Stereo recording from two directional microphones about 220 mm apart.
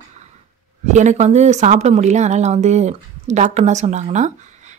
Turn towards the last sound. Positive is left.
turn(degrees=-30)  # may be behind; listen again after turning